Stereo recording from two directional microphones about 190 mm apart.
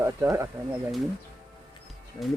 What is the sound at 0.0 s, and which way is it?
Speech, 15° right (ahead or behind).